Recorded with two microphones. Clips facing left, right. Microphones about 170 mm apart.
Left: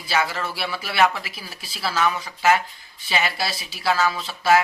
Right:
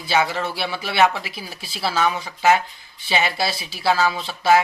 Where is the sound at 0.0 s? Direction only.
25° right (ahead or behind).